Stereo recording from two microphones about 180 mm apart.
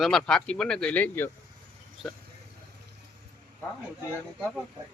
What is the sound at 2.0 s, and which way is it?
Speech, centre (ahead or behind).